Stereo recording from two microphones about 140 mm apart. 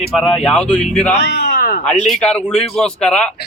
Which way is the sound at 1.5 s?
90° left.